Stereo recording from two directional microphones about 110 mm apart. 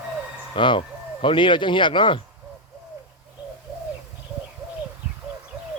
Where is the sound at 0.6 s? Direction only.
45° left (ahead or behind).